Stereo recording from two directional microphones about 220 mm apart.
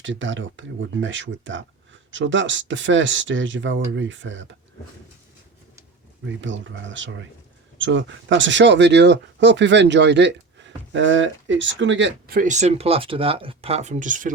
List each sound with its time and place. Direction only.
0.0 s speech: 55° right (ahead or behind)
6.2 s speech: 55° right (ahead or behind)
12.4 s speech: 35° right (ahead or behind)